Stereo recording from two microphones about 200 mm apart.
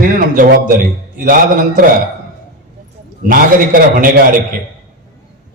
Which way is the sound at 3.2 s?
45° right (ahead or behind).